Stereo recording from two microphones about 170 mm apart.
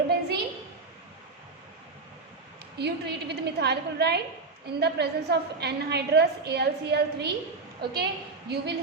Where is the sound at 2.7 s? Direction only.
75° right (ahead or behind).